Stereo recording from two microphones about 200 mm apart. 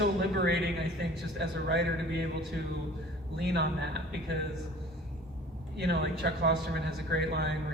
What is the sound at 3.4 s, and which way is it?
Speech, 55° right (ahead or behind).